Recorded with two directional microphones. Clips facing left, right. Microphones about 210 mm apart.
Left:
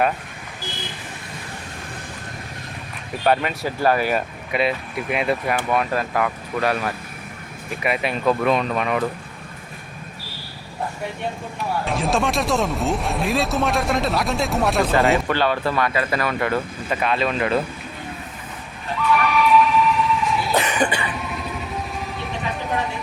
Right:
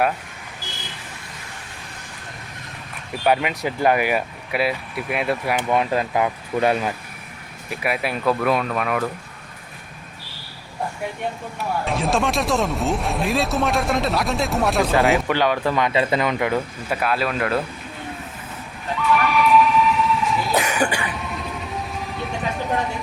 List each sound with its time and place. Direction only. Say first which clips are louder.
3.2 s speech: even; 15° right (ahead or behind)
5.5 s speech: right 1 dB; 20° right (ahead or behind)
7.8 s speech: left 1 dB; 5° right (ahead or behind)
11.9 s speech: even; centre (ahead or behind)
15.3 s speech: right 1 dB; 15° right (ahead or behind)
19.1 s a sound: even; centre (ahead or behind)